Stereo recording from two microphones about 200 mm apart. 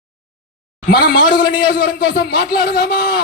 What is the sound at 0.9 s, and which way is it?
Speech, 50° left (ahead or behind).